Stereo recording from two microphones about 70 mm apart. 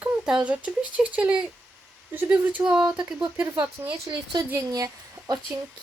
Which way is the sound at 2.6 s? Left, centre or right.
Centre.